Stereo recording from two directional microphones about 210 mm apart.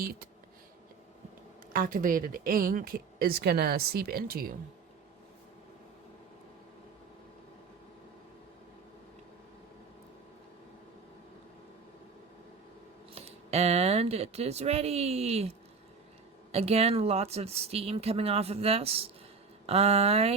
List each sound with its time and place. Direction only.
1.7 s a woman's voice: 40° right (ahead or behind)
13.1 s speech: 30° right (ahead or behind)